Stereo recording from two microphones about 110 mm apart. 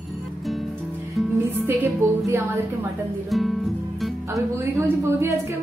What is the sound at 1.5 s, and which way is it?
Speech, 20° right (ahead or behind).